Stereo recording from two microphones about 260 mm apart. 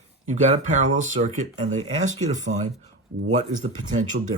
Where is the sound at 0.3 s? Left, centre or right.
Right.